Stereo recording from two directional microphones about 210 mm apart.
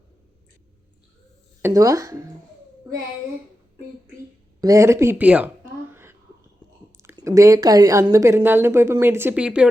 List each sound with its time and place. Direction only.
1.6 s speech: 15° right (ahead or behind)
4.6 s speech: 15° right (ahead or behind)
5.9 s a sound: 10° right (ahead or behind)
6.9 s speech: 15° right (ahead or behind)